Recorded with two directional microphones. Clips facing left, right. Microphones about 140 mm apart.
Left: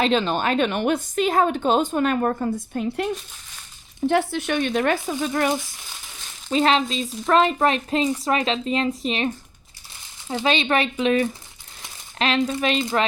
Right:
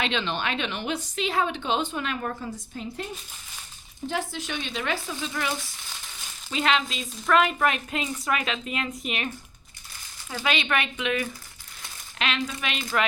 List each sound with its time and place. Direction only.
0.0 s a woman's voice: 40° left (ahead or behind)
2.7 s a woman's voice: 65° left (ahead or behind); by 5.5 s 50° left (ahead or behind)
6.5 s speech: 40° left (ahead or behind)
7.3 s speech: 25° left (ahead or behind)